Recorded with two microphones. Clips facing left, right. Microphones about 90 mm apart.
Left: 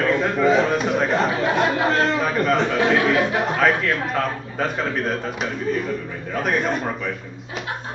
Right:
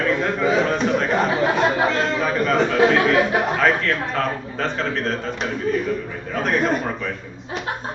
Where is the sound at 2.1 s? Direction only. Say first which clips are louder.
Even; 5° left (ahead or behind).